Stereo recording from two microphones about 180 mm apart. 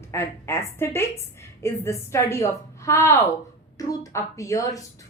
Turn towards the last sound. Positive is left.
turn(degrees=15)  # may be behind; listen again after turning